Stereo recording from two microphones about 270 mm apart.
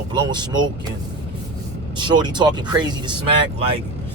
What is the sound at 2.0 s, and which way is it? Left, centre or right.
Speech, centre.